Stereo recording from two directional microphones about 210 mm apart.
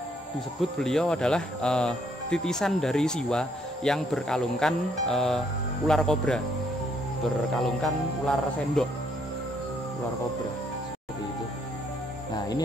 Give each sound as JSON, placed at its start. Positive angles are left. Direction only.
{"t": 0.6, "sound": "speech", "side_deg": 0}
{"t": 7.6, "sound": "speech", "side_deg": 0}
{"t": 12.4, "sound": "music", "side_deg": 20}